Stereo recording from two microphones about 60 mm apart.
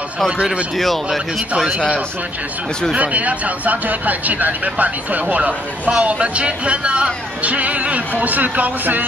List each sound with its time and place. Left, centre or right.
0.7 s speech: centre
2.9 s speech: right